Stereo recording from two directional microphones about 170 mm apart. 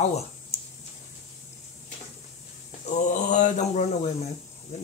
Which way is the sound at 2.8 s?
45° left (ahead or behind).